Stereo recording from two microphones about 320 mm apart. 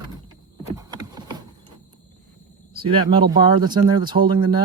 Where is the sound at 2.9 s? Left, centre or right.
Centre.